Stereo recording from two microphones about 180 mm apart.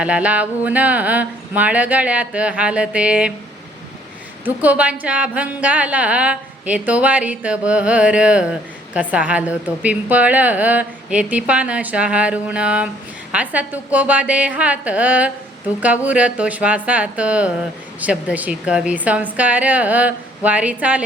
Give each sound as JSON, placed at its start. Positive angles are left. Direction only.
{"t": 0.0, "sound": "a woman's voice", "side_deg": -5}
{"t": 4.4, "sound": "a woman's voice", "side_deg": -10}